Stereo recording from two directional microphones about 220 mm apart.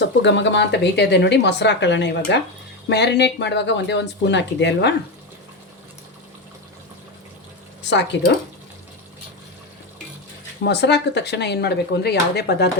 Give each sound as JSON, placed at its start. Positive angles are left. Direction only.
{"t": 0.0, "sound": "speech", "side_deg": 55}
{"t": 7.9, "sound": "speech", "side_deg": 50}
{"t": 10.6, "sound": "speech", "side_deg": 50}